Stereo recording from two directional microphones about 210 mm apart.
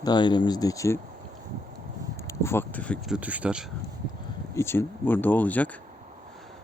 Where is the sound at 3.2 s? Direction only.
5° right (ahead or behind).